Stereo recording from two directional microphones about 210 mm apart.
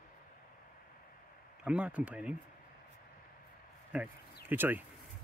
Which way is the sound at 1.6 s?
5° right (ahead or behind).